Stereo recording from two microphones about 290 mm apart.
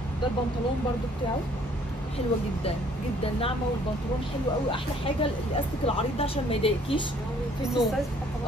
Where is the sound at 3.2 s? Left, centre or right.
Centre.